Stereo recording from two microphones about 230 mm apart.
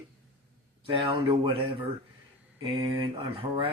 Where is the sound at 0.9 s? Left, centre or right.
Right.